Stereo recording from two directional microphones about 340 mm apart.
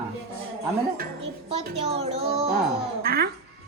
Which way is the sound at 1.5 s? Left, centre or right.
Centre.